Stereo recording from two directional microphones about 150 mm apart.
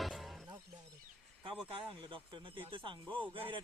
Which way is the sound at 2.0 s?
35° right (ahead or behind).